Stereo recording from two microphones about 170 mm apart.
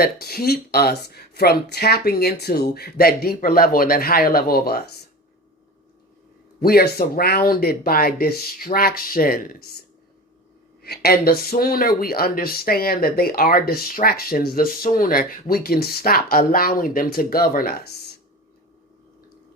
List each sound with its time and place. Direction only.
0.0 s speech: 65° left (ahead or behind)
6.6 s speech: 65° left (ahead or behind)
10.8 s speech: 65° left (ahead or behind)